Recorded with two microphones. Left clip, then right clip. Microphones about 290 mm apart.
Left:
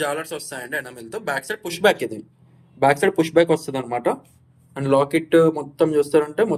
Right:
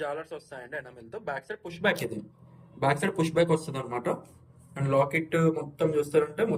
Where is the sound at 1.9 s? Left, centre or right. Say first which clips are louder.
Left 8 dB; centre.